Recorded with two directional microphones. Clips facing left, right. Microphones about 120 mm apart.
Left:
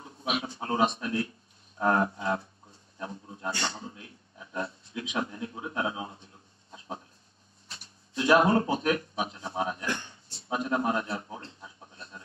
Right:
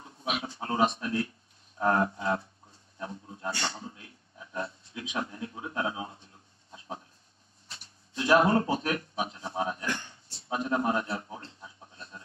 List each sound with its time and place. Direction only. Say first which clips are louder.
0.0 s a man's voice: left 2 dB; 20° left (ahead or behind)
1.8 s a sound: even; 20° left (ahead or behind)
3.0 s a man's voice: even; 20° left (ahead or behind)
7.7 s speech: left 3 dB; 20° left (ahead or behind)
9.8 s a sound: left 1 dB; 20° left (ahead or behind)
11.0 s speech: even; 20° left (ahead or behind)